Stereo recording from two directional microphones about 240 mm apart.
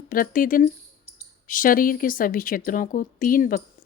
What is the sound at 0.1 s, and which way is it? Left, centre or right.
Speech, left.